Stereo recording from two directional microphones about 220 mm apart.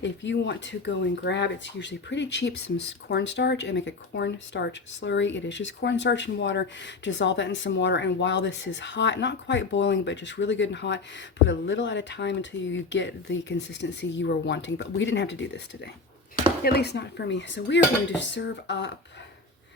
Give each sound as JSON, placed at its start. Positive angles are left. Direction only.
{"t": 0.0, "sound": "speech", "side_deg": 55}